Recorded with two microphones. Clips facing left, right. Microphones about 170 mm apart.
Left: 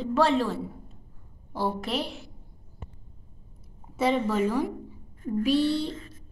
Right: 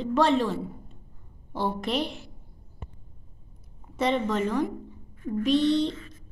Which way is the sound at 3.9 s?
5° left (ahead or behind).